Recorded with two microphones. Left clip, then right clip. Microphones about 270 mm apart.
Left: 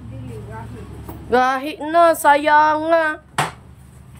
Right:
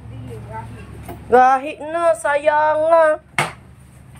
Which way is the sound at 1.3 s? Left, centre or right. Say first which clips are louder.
Right 4 dB; centre.